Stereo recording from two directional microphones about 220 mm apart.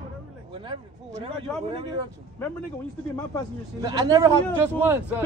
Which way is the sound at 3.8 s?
15° right (ahead or behind).